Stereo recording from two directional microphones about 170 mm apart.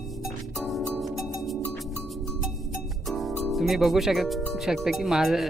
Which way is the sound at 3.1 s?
Centre (ahead or behind).